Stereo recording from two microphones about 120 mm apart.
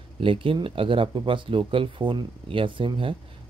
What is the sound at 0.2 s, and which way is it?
Speech, 50° right (ahead or behind).